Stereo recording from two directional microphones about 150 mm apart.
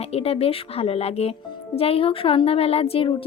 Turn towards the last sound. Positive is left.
turn(degrees=40)  # may be behind; listen again after turning